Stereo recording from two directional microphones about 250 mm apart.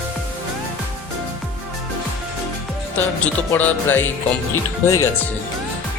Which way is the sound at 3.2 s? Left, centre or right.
Centre.